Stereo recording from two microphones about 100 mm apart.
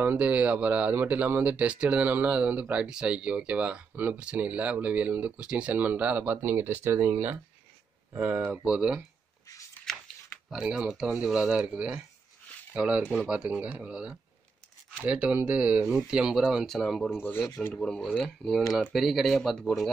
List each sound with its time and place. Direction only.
0.0 s speech: 20° right (ahead or behind)
9.9 s a sound: 5° left (ahead or behind)
10.5 s speech: 10° right (ahead or behind)
17.2 s speech: 20° left (ahead or behind)
17.6 s speech: 10° left (ahead or behind)